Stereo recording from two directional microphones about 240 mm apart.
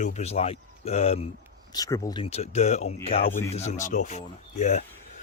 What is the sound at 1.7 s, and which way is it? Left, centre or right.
Speech, centre.